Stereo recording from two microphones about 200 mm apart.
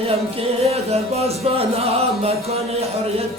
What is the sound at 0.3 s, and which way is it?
Music, 30° right (ahead or behind).